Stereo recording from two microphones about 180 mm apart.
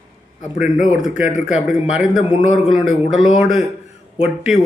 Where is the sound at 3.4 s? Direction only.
5° right (ahead or behind).